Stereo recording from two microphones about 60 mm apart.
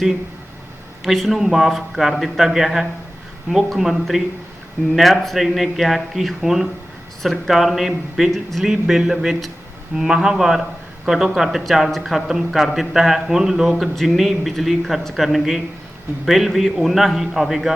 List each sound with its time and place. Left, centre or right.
1.0 s speech: centre